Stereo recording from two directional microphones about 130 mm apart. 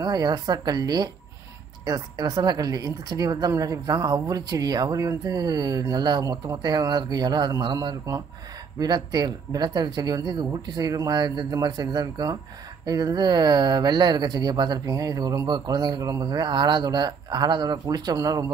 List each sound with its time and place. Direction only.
0.0 s speech: 30° right (ahead or behind)